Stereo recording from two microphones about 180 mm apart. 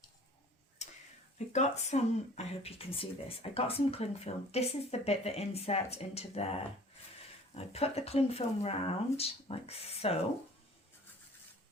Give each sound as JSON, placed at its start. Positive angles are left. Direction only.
{"t": 0.8, "sound": "a sound", "side_deg": 40}
{"t": 1.5, "sound": "speech", "side_deg": 40}
{"t": 7.5, "sound": "speech", "side_deg": 35}